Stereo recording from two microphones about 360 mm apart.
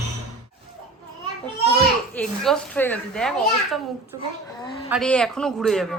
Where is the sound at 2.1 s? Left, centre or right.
Centre.